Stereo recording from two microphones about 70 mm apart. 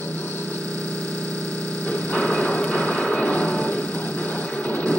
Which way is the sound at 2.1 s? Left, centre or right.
Centre.